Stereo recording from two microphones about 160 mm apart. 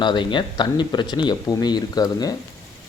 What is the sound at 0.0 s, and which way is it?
Speech, 30° left (ahead or behind).